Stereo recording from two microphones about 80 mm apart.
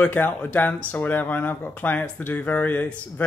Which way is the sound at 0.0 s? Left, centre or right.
Left.